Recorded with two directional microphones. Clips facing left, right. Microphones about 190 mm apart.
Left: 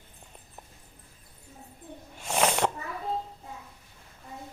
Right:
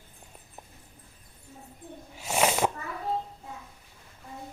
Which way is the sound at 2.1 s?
5° right (ahead or behind).